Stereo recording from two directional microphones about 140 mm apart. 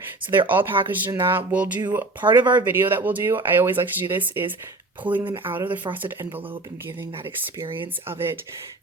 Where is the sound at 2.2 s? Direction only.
35° right (ahead or behind).